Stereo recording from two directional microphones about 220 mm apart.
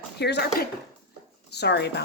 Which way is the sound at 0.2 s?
50° left (ahead or behind).